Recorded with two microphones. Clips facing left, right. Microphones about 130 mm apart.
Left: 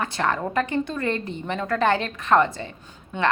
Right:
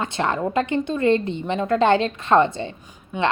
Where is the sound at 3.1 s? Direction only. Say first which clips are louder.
Right 2 dB; 10° right (ahead or behind).